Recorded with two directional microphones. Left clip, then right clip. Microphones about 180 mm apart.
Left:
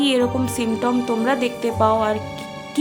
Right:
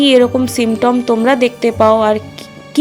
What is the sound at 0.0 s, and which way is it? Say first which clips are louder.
Speech: right 9 dB; 30° right (ahead or behind).